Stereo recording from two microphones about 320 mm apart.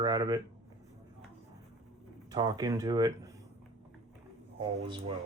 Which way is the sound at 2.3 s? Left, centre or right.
Centre.